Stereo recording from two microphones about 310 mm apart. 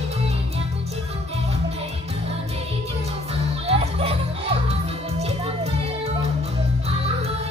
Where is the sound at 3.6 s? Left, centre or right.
Centre.